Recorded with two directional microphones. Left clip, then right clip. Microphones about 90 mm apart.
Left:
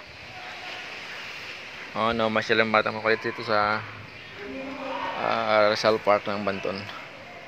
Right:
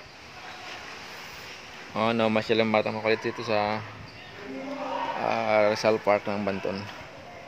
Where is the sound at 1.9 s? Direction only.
65° right (ahead or behind); by 2.8 s 90° right.